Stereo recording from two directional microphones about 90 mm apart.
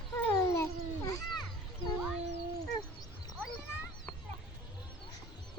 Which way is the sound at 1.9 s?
10° right (ahead or behind).